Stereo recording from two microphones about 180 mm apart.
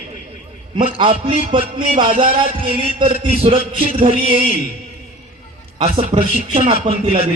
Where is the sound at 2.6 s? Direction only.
35° right (ahead or behind).